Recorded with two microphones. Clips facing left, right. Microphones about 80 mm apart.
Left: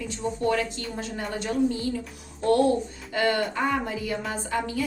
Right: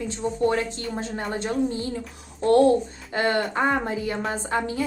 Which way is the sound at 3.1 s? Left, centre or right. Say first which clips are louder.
Right 1 dB; right.